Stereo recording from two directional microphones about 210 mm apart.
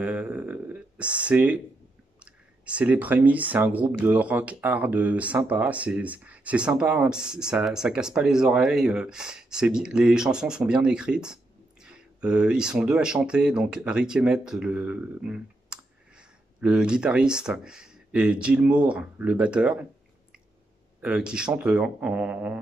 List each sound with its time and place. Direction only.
0.0 s speech: 5° right (ahead or behind)
21.0 s speech: 5° right (ahead or behind)